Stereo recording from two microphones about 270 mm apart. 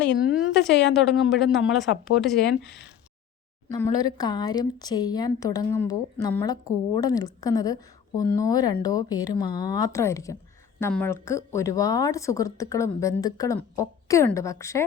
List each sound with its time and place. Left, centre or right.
0.2 s speech: centre
0.7 s speech: left
0.9 s speech: centre
2.6 s speech: left
3.7 s speech: centre